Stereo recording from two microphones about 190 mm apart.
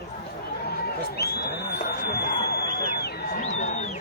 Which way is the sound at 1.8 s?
60° left (ahead or behind).